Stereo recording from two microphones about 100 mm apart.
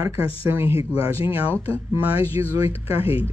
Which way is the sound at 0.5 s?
25° right (ahead or behind).